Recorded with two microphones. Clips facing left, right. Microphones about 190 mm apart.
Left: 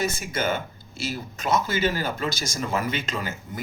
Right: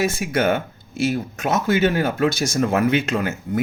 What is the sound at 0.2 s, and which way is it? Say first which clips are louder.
Speech: right 7 dB; 60° right (ahead or behind).